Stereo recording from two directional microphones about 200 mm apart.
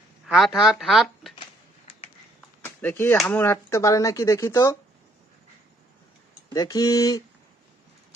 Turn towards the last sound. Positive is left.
turn(degrees=15)  # may be behind; listen again after turning